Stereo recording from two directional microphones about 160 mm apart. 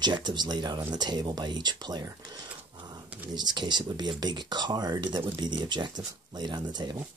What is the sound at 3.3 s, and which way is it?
Speech, 25° right (ahead or behind).